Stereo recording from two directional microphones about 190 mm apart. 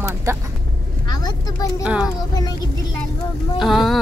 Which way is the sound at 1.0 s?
20° left (ahead or behind).